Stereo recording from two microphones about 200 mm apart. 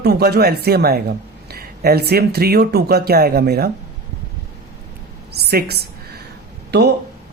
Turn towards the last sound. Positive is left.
turn(degrees=-55)  # may be behind; listen again after turning